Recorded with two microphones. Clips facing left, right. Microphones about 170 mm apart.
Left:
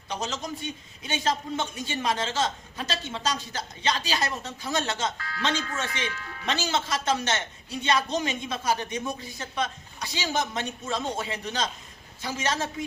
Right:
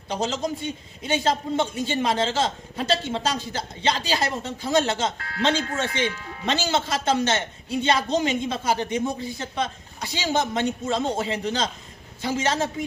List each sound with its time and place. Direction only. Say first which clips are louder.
0.1 s speech: right 6 dB; 30° right (ahead or behind)
5.1 s speech: right 1 dB; 60° right (ahead or behind)
5.4 s speech: right 6 dB; 30° right (ahead or behind)